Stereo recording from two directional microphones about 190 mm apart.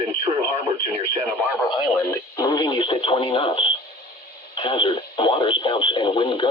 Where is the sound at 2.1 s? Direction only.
20° left (ahead or behind).